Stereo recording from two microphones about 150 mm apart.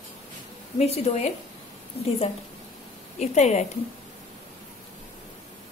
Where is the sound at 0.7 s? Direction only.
45° left (ahead or behind).